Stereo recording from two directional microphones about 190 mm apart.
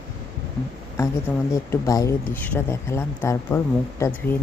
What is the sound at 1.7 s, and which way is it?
Speech, 15° left (ahead or behind).